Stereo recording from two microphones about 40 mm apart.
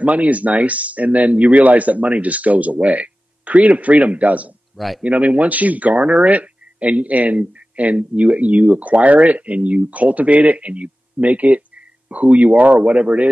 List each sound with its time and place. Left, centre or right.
0.0 s speech: right
4.7 s speech: centre
5.0 s speech: right